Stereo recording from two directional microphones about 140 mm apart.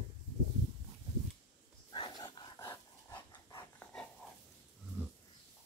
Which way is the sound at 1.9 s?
35° left (ahead or behind).